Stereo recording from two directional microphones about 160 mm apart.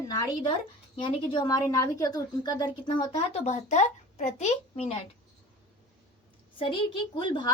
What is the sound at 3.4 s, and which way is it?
A woman's voice, 45° left (ahead or behind).